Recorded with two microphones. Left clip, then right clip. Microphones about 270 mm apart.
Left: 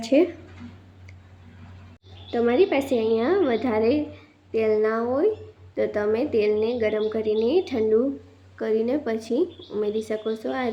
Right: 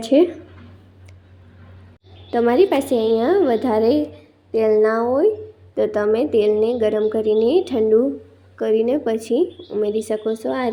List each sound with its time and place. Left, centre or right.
0.0 s a woman's voice: centre
2.3 s a woman's voice: centre